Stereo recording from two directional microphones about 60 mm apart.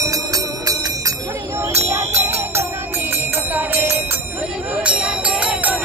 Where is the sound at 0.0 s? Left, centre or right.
Right.